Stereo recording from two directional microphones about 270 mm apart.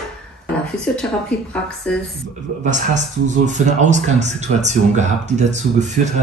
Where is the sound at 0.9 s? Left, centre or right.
Centre.